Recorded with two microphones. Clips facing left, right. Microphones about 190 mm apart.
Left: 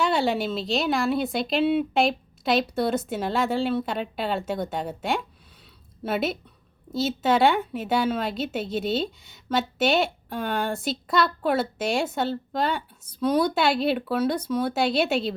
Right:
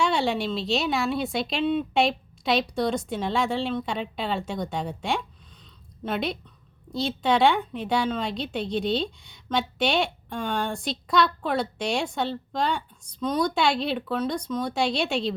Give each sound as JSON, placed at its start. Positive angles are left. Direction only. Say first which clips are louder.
{"t": 0.0, "sound": "a woman's voice", "louder": "left 1 dB", "side_deg": 0}